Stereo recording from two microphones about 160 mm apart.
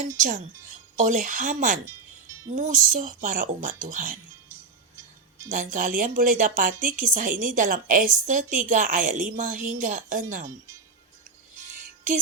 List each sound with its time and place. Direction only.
0.2 s a woman's voice: 50° right (ahead or behind)
5.5 s a woman's voice: 55° right (ahead or behind)
11.7 s music: 55° right (ahead or behind)